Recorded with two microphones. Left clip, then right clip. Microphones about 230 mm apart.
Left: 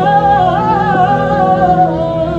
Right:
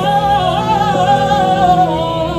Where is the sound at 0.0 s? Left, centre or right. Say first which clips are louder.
Left 3 dB; right.